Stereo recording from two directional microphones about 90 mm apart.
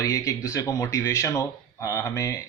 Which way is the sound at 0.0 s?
35° left (ahead or behind).